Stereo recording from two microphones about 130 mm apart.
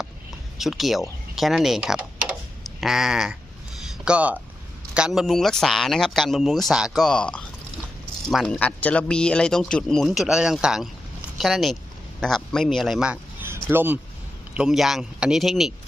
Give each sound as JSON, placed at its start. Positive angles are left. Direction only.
{"t": 0.6, "sound": "speech", "side_deg": 0}
{"t": 13.4, "sound": "a sound", "side_deg": -15}
{"t": 14.5, "sound": "speech", "side_deg": -5}